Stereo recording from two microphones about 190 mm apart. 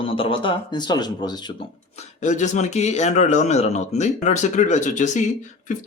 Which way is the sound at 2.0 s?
40° left (ahead or behind).